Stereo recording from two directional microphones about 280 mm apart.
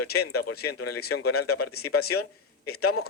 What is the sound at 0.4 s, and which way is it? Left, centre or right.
A man's voice, left.